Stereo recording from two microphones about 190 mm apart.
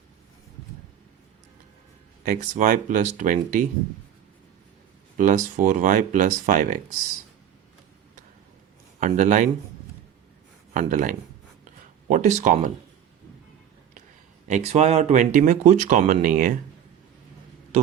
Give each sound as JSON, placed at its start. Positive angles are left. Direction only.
{"t": 2.2, "sound": "speech", "side_deg": -45}
{"t": 5.1, "sound": "speech", "side_deg": -40}
{"t": 9.0, "sound": "speech", "side_deg": -40}
{"t": 10.8, "sound": "speech", "side_deg": -45}
{"t": 11.6, "sound": "a sound", "side_deg": -40}
{"t": 14.4, "sound": "speech", "side_deg": -35}